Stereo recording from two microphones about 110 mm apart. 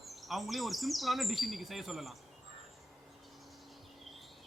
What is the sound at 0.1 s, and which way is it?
Speech, centre (ahead or behind).